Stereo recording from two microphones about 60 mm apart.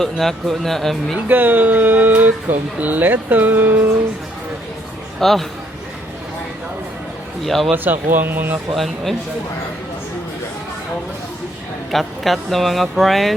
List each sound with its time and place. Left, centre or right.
0.0 s speech: centre
1.3 s speech: right
5.2 s speech: centre
7.4 s speech: centre
7.7 s speech: right
8.7 s speech: centre
11.9 s speech: centre